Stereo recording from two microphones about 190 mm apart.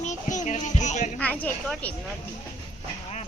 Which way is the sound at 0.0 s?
40° left (ahead or behind).